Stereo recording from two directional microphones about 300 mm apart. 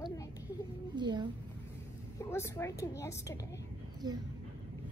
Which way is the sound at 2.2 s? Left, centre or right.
Centre.